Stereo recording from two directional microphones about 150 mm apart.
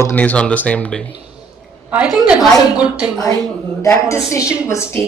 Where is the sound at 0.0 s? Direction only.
10° left (ahead or behind).